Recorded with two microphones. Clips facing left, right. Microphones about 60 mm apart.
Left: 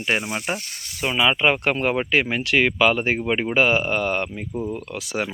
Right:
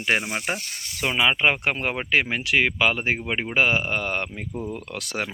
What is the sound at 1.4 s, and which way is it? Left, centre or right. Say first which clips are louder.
Speech: left 2 dB; right.